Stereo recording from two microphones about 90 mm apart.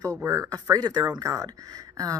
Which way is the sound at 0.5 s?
50° right (ahead or behind).